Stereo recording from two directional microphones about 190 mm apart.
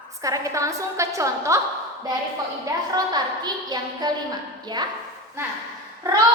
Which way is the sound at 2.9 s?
20° right (ahead or behind).